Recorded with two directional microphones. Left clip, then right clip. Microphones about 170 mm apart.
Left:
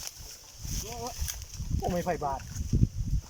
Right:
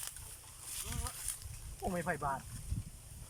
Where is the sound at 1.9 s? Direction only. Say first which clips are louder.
Left 6 dB; 25° left (ahead or behind).